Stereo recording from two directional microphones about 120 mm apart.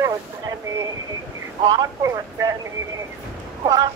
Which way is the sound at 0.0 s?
30° right (ahead or behind).